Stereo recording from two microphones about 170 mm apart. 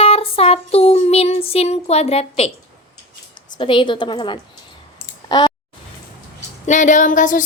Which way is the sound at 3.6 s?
30° left (ahead or behind).